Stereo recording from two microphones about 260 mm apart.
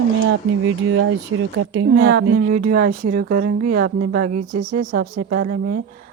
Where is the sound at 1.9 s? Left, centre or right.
Right.